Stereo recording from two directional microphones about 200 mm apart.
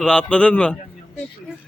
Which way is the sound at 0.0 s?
5° left (ahead or behind).